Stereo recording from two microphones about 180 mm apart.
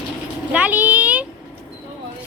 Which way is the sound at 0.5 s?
10° right (ahead or behind).